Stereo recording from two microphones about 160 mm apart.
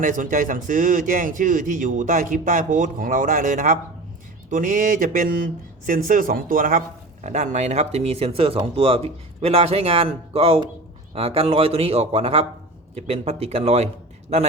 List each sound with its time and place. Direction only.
0.0 s a man's voice: 55° right (ahead or behind); by 13.8 s 40° right (ahead or behind)